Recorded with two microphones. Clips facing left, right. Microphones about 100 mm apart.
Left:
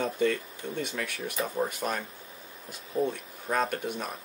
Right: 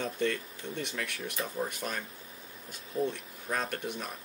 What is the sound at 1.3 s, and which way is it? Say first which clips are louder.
Speech: left 5 dB; 30° left (ahead or behind).